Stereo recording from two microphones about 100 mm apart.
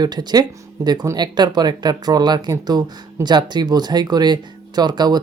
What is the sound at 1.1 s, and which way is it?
Speech, 45° right (ahead or behind).